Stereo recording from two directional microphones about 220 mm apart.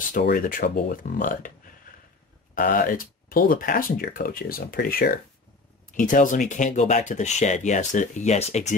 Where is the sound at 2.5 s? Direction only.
40° left (ahead or behind).